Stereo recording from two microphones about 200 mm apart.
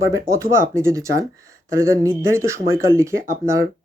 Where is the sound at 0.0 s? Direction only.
15° right (ahead or behind).